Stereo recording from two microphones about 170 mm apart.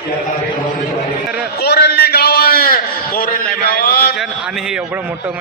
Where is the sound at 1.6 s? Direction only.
70° left (ahead or behind).